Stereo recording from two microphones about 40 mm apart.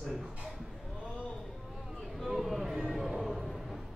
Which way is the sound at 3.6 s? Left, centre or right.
Centre.